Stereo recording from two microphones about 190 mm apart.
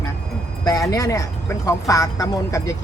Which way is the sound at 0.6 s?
20° left (ahead or behind).